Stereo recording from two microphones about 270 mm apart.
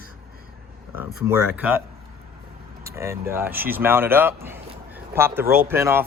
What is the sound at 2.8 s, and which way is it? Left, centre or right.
Speech, centre.